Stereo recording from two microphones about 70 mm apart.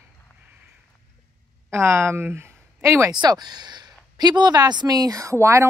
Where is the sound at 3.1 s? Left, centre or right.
Right.